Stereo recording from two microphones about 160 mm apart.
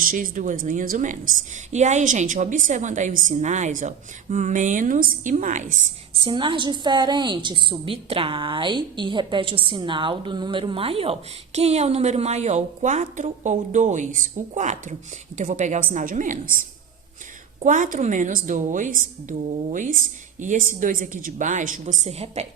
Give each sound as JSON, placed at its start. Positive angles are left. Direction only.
{"t": 0.0, "sound": "a woman's voice", "side_deg": -60}
{"t": 6.2, "sound": "a woman's voice", "side_deg": -30}